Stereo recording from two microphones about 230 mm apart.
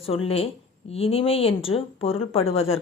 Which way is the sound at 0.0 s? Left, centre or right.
Left.